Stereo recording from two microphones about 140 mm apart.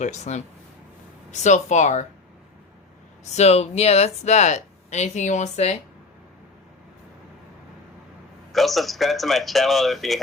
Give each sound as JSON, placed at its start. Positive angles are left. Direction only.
{"t": 0.0, "sound": "speech", "side_deg": 55}
{"t": 3.3, "sound": "speech", "side_deg": 50}
{"t": 8.5, "sound": "speech", "side_deg": 0}